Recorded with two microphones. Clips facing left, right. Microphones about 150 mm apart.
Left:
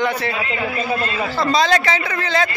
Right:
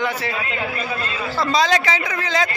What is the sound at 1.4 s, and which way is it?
A man's voice, 10° right (ahead or behind).